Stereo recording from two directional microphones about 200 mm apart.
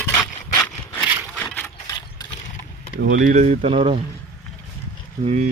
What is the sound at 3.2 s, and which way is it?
Speech, 35° right (ahead or behind).